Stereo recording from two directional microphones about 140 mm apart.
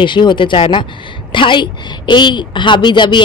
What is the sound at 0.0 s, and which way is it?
A woman's voice, 35° left (ahead or behind).